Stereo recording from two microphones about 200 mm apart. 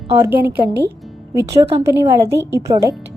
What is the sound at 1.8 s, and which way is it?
A woman's voice, 15° right (ahead or behind).